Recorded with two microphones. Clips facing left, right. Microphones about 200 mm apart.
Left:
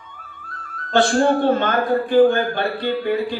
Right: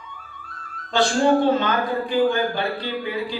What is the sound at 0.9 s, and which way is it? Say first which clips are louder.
A man's voice: left 2 dB; 55° left (ahead or behind).